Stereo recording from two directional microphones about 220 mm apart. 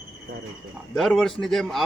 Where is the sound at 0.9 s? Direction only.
Centre (ahead or behind).